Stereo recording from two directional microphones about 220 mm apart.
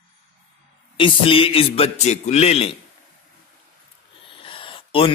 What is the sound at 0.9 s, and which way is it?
A man's voice, 25° left (ahead or behind).